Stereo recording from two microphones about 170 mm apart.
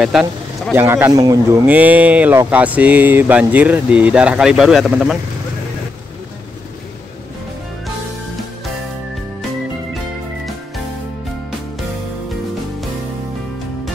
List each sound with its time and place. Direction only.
0.0 s a man's voice: centre (ahead or behind)
0.7 s speech: 15° right (ahead or behind)
1.7 s speech: 10° right (ahead or behind)